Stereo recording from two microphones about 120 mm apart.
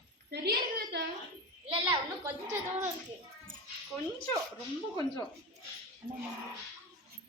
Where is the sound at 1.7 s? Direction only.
45° right (ahead or behind).